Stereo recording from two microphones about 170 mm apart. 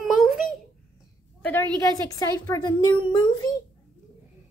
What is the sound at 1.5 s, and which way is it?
A woman's voice, 10° left (ahead or behind).